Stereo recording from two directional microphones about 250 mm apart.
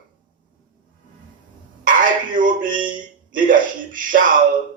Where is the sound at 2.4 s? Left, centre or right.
Right.